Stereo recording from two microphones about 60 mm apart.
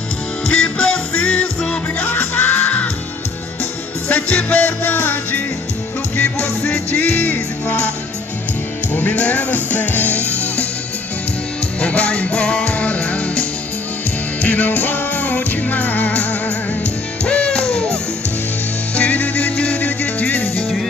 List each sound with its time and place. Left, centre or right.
0.5 s music: centre
4.1 s music: left
8.9 s music: left
11.8 s music: centre
18.9 s music: left